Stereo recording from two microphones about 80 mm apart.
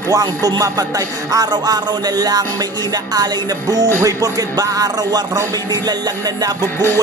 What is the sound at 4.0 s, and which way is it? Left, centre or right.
Music, right.